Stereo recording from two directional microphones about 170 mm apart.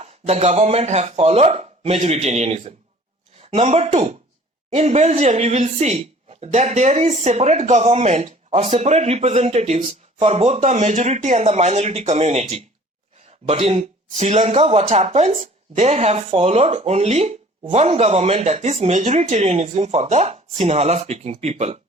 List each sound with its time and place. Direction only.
0.0 s speech: 40° right (ahead or behind)